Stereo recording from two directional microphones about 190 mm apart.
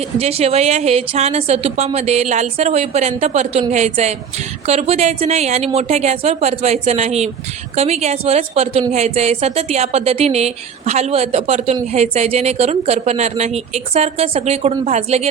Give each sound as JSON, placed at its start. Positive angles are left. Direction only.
{"t": 0.2, "sound": "a woman's voice", "side_deg": -30}